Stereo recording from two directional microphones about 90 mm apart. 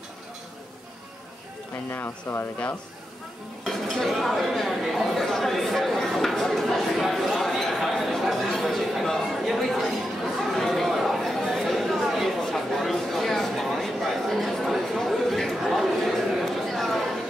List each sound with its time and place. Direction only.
1.9 s speech: 25° left (ahead or behind)
3.6 s chatter: centre (ahead or behind)